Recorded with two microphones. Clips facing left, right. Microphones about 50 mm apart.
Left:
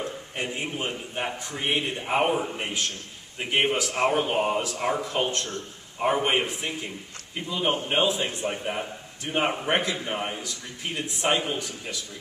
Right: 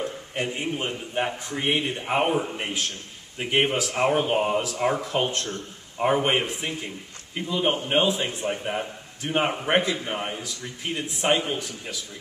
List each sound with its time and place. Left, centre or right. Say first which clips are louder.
0.1 s a man's voice: right 2 dB; centre